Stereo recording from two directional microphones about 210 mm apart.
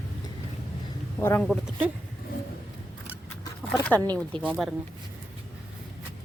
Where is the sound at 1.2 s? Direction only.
10° left (ahead or behind).